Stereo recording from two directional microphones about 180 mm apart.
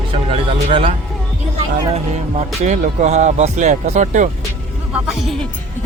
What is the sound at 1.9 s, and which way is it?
Speech, 40° right (ahead or behind).